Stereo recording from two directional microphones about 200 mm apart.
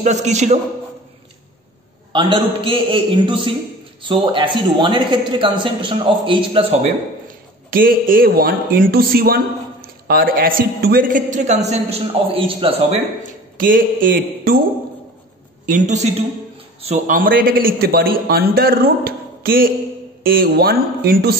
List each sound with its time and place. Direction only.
0.0 s a woman's voice: 35° right (ahead or behind)
2.1 s a man's voice: 25° right (ahead or behind)
7.7 s a man's voice: 45° right (ahead or behind); by 13.0 s 30° right (ahead or behind)
13.6 s a man's voice: 45° right (ahead or behind)
15.6 s a woman's voice: 40° right (ahead or behind)